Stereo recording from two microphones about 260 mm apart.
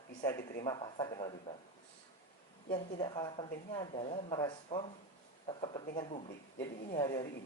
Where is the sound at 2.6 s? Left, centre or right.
Centre.